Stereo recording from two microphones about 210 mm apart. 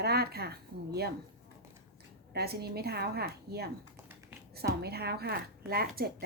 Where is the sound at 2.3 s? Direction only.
50° right (ahead or behind).